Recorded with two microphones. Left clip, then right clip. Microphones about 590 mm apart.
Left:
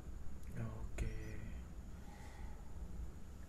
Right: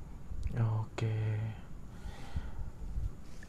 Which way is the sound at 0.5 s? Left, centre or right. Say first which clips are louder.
Right 11 dB; right.